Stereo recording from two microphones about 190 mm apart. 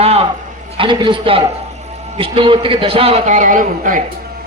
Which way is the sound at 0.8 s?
25° right (ahead or behind).